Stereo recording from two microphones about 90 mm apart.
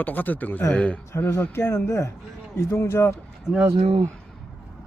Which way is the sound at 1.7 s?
35° left (ahead or behind).